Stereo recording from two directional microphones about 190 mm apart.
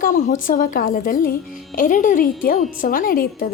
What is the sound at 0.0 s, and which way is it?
Speech, 45° left (ahead or behind).